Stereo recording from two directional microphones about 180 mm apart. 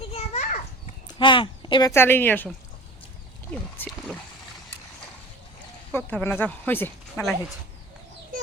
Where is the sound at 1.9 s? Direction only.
10° left (ahead or behind).